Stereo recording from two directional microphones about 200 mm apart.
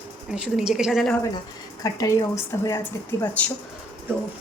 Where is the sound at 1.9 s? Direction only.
15° left (ahead or behind).